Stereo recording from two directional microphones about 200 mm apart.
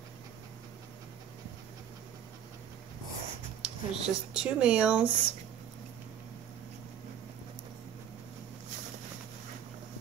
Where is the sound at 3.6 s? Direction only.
5° right (ahead or behind).